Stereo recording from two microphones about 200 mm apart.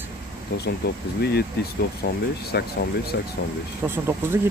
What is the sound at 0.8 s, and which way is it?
Speech, 55° left (ahead or behind).